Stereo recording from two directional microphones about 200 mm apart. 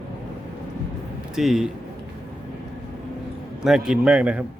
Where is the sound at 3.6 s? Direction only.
5° right (ahead or behind).